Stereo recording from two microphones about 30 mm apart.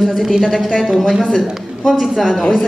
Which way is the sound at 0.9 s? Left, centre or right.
Centre.